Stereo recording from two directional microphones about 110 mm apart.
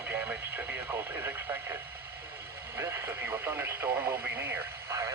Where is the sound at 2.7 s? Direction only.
20° right (ahead or behind).